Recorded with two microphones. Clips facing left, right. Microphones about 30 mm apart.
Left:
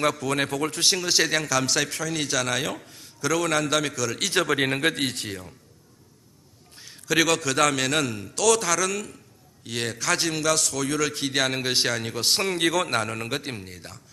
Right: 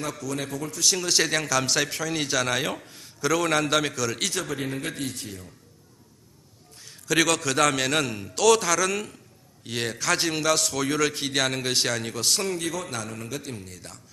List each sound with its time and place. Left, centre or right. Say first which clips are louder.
0.0 s a man's voice: left 7 dB; left
0.9 s a man's voice: left 1 dB; centre
4.4 s a man's voice: left 7 dB; left
6.7 s a sound: left 1 dB; centre
7.2 s a man's voice: left 1 dB; centre; by 12.5 s left
12.5 s a man's voice: left 6 dB; left
12.9 s a man's voice: left 6 dB; left
13.6 s speech: left 2 dB; left